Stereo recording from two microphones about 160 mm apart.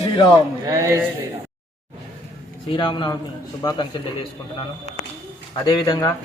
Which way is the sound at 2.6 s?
30° left (ahead or behind).